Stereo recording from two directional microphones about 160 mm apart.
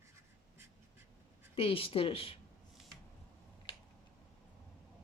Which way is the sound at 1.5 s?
35° left (ahead or behind).